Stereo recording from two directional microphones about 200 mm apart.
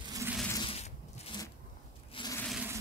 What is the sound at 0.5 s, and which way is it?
Zipper, 25° left (ahead or behind).